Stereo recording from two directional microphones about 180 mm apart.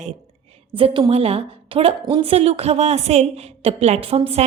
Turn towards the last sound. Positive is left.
turn(degrees=-35)  # may be behind; listen again after turning